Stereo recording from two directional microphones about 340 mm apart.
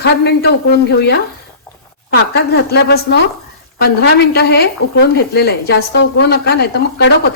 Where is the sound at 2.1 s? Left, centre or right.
Left.